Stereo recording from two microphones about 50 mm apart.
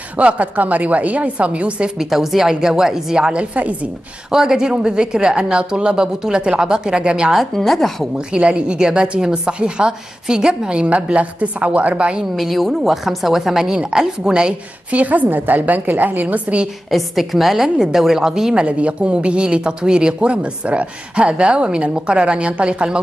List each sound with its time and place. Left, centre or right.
0.2 s speech: right
2.0 s a woman's voice: centre
7.3 s a woman's voice: centre
8.3 s speech: right
12.4 s a woman's voice: centre
14.9 s a woman's voice: right
16.9 s a woman's voice: centre
18.7 s speech: right